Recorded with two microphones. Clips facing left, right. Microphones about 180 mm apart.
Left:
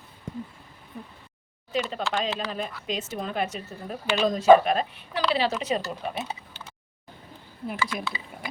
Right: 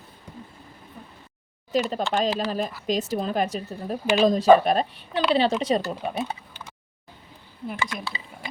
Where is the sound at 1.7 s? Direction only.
40° right (ahead or behind).